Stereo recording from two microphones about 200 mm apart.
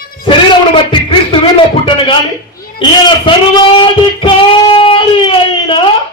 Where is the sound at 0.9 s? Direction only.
25° left (ahead or behind).